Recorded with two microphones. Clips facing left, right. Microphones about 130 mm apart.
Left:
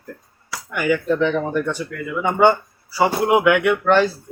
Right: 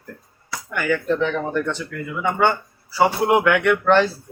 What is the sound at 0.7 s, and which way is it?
Speech, 10° left (ahead or behind).